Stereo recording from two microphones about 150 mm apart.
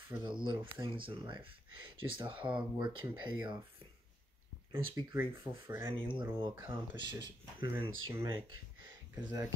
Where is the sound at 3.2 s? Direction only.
30° right (ahead or behind).